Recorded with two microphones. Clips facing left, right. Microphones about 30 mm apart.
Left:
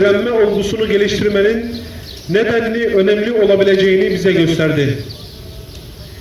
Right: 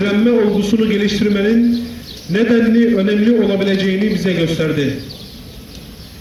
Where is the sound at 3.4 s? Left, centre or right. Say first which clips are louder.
Left 5 dB; left.